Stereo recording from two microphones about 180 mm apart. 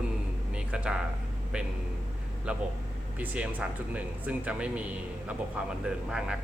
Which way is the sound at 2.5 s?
5° right (ahead or behind).